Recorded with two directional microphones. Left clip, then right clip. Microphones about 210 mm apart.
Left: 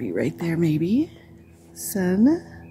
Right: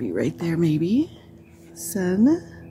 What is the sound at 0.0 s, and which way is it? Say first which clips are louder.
Speech: even; centre (ahead or behind).